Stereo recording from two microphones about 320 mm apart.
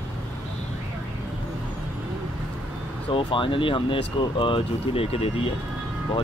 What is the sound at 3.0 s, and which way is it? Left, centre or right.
Speech, centre.